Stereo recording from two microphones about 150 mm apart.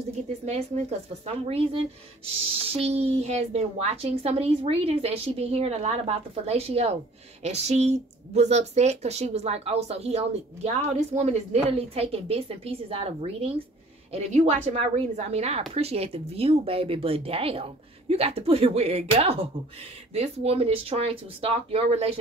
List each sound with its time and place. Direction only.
0.5 s speech: 45° right (ahead or behind)